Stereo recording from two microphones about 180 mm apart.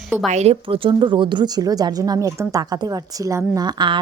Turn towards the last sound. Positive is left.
turn(degrees=-25)  # may be behind; listen again after turning